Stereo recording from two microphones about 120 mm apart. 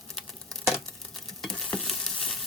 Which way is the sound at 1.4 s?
5° left (ahead or behind).